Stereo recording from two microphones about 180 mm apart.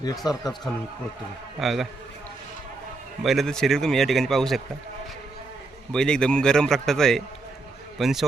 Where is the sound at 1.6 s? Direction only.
Centre (ahead or behind).